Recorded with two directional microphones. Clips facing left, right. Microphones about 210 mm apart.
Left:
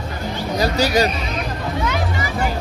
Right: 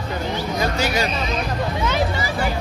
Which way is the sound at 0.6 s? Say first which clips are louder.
Left 6 dB; 35° left (ahead or behind).